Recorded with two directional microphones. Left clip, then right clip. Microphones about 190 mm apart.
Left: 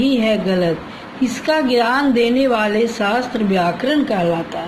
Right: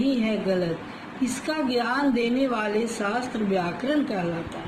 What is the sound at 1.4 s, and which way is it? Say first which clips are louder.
A man's voice: left 11 dB; 50° left (ahead or behind).